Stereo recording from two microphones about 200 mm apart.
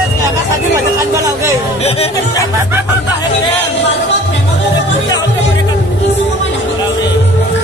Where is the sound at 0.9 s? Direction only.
15° right (ahead or behind).